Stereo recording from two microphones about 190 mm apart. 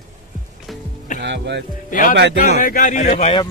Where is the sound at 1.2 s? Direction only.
65° right (ahead or behind).